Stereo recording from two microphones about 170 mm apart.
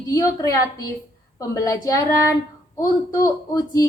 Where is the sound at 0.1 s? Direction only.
20° left (ahead or behind).